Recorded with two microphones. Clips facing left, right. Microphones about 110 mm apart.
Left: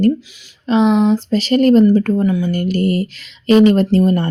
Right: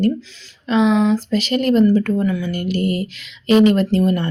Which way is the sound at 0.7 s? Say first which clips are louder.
Left 2 dB; 30° left (ahead or behind).